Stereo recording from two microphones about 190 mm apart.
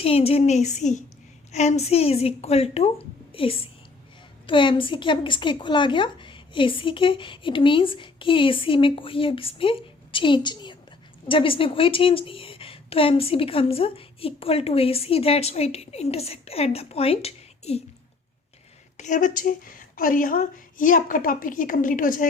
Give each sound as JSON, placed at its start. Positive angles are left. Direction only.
{"t": 0.0, "sound": "a woman's voice", "side_deg": 30}
{"t": 18.9, "sound": "a woman's voice", "side_deg": 40}